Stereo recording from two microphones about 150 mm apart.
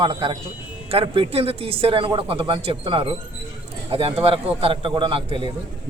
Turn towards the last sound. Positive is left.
turn(degrees=-35)  # may be behind; listen again after turning